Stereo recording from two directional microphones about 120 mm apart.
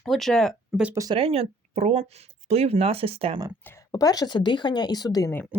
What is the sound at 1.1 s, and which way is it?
Speech, 55° right (ahead or behind).